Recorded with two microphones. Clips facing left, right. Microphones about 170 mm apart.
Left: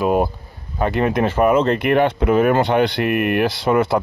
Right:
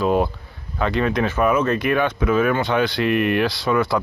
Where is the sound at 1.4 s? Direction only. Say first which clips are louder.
Left 4 dB; 30° left (ahead or behind).